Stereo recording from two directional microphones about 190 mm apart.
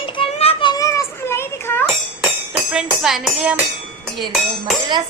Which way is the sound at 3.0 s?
Centre (ahead or behind).